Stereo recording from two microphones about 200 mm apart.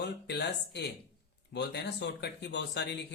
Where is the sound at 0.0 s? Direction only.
55° left (ahead or behind).